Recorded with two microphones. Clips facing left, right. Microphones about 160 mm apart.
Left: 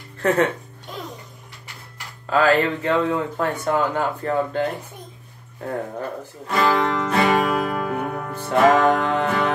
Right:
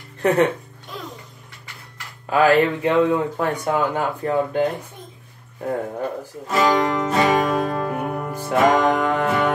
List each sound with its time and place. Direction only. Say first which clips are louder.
0.2 s speech: right 2 dB; 15° right (ahead or behind)
2.2 s speech: right 2 dB; 15° right (ahead or behind)
6.4 s music: right 1 dB; centre (ahead or behind)
8.5 s music: left 1 dB; centre (ahead or behind)
9.0 s music: right 1 dB; 10° right (ahead or behind)